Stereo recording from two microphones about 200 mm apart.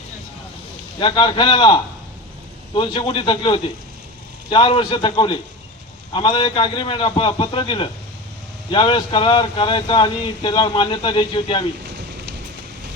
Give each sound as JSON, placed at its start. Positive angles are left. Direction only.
{"t": 0.9, "sound": "speech", "side_deg": 25}